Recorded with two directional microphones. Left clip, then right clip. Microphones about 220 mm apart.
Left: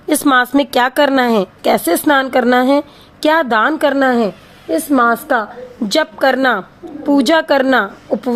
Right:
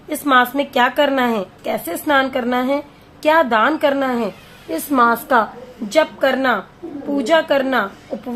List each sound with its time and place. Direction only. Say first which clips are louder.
0.1 s a woman's voice: left 3 dB; 40° left (ahead or behind)
4.7 s a woman's voice: left 3 dB; 20° left (ahead or behind)
5.9 s a woman's voice: left 2 dB; 45° left (ahead or behind)